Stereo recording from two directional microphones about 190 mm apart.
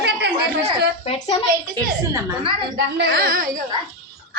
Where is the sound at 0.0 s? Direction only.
55° right (ahead or behind).